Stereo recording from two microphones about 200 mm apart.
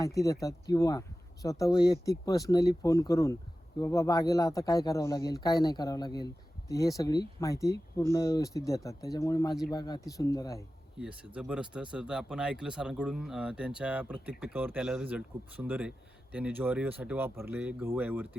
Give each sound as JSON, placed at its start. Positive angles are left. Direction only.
{"t": 0.0, "sound": "speech", "side_deg": 15}
{"t": 10.9, "sound": "speech", "side_deg": -5}